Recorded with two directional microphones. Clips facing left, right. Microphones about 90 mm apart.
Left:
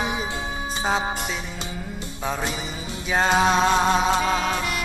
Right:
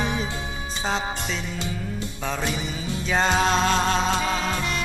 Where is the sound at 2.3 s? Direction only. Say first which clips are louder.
Even; 15° left (ahead or behind).